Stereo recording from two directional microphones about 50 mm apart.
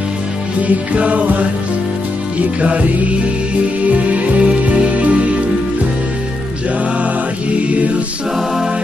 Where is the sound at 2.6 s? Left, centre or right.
Right.